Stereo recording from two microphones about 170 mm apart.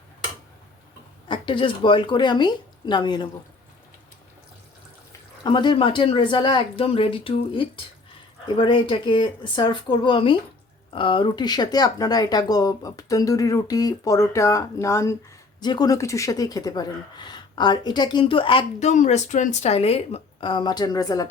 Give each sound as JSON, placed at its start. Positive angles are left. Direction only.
{"t": 1.3, "sound": "speech", "side_deg": 30}
{"t": 5.4, "sound": "speech", "side_deg": 25}
{"t": 18.9, "sound": "speech", "side_deg": 45}